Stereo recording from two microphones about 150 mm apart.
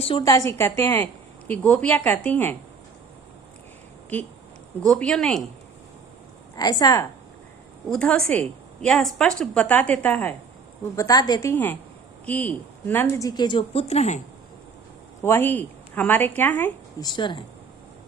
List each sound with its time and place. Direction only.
0.2 s a woman's voice: 20° left (ahead or behind)
4.8 s speech: 5° left (ahead or behind)
6.6 s a woman's voice: 25° left (ahead or behind)
7.9 s a woman's voice: 5° left (ahead or behind)
10.9 s a woman's voice: 25° left (ahead or behind)
13.2 s speech: 30° left (ahead or behind); by 14.2 s 45° left (ahead or behind)
15.2 s a woman's voice: 15° left (ahead or behind)
17.0 s speech: 30° left (ahead or behind)